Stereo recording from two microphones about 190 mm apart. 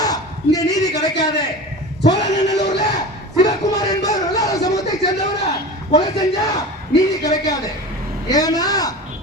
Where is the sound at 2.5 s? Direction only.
20° left (ahead or behind).